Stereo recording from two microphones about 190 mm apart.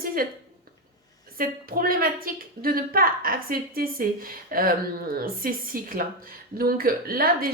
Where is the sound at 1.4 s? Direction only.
50° right (ahead or behind).